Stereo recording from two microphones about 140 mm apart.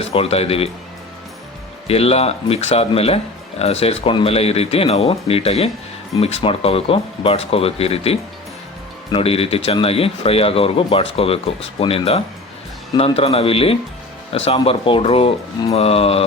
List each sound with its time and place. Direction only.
0.0 s speech: 45° left (ahead or behind)
1.9 s speech: 45° left (ahead or behind)